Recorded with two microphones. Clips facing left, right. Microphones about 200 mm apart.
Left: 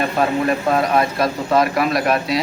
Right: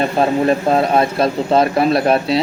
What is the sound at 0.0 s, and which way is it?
Speech, 30° right (ahead or behind).